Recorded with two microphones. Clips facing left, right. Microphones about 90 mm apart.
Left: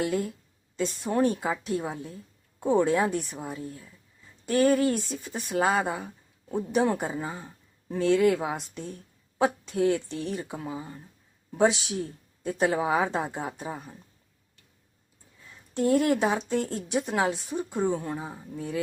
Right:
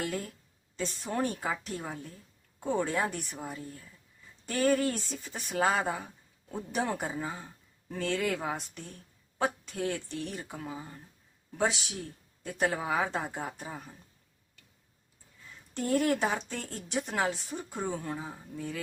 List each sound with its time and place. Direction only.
0.0 s speech: 15° left (ahead or behind)
15.7 s speech: 15° left (ahead or behind)